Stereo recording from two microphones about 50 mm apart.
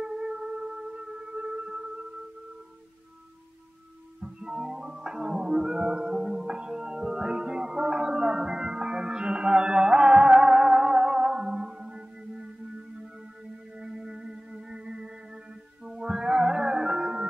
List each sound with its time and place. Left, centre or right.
0.0 s music: centre
4.2 s music: centre
13.7 s music: centre